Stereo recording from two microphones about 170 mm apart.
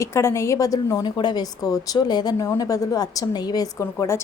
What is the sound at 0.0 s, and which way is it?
A woman's voice, 15° left (ahead or behind).